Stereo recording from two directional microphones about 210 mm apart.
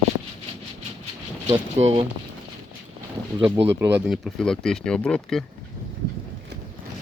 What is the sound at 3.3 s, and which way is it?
Speech, 20° right (ahead or behind).